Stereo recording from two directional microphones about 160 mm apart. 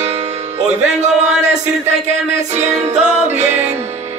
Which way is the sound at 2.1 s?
45° right (ahead or behind).